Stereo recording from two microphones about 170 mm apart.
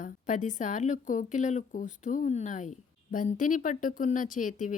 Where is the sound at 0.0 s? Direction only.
50° left (ahead or behind).